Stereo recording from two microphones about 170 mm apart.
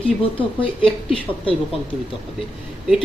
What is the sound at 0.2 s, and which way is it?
Speech, 30° left (ahead or behind).